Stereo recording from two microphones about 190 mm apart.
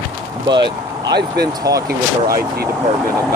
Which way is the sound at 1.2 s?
55° right (ahead or behind).